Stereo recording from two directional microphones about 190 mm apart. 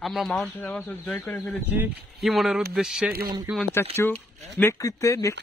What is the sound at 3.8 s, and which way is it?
Speech, 10° left (ahead or behind).